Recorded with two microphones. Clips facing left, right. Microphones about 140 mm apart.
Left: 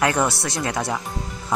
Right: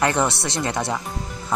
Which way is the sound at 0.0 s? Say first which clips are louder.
Even; centre (ahead or behind).